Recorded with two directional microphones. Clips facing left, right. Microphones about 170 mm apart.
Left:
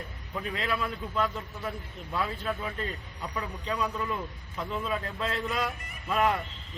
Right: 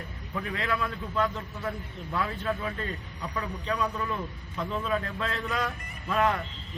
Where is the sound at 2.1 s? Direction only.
25° left (ahead or behind).